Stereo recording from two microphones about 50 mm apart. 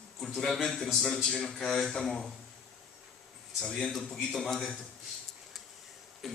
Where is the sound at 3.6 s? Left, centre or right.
Centre.